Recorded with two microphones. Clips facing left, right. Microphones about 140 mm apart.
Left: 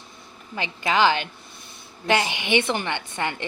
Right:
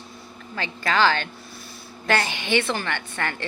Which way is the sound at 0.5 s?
20° left (ahead or behind).